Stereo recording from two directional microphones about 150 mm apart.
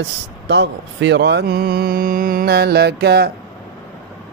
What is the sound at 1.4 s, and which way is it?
Mantra, 90° right.